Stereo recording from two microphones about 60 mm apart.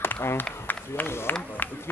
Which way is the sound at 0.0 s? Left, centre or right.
Left.